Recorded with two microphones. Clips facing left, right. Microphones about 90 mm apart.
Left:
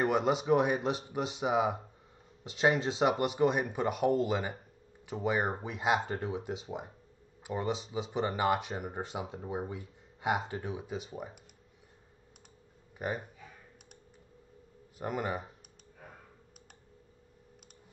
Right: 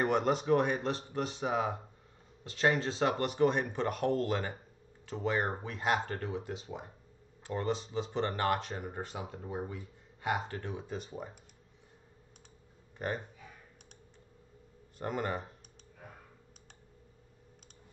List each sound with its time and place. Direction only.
0.0 s speech: centre (ahead or behind)
6.2 s speech: 15° left (ahead or behind)
6.6 s speech: 5° left (ahead or behind)
13.0 s speech: 5° left (ahead or behind)
15.0 s speech: 5° left (ahead or behind)